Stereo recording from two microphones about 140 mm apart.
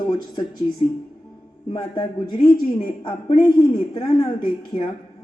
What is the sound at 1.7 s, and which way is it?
A woman's voice, 35° left (ahead or behind).